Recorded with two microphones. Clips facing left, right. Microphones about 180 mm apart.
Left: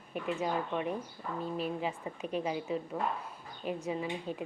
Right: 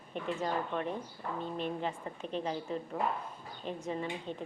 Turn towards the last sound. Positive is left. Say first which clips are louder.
# left 1 dB
turn(degrees=10)  # may be behind; listen again after turning